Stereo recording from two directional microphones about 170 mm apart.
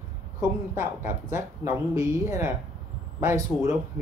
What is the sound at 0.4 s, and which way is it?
Speech, 15° right (ahead or behind).